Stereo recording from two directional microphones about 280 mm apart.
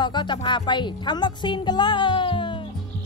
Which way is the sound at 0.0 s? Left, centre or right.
Centre.